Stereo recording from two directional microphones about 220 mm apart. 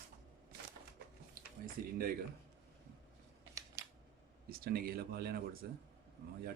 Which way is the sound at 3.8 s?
15° right (ahead or behind).